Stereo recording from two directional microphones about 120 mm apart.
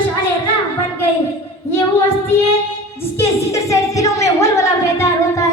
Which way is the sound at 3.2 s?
25° left (ahead or behind).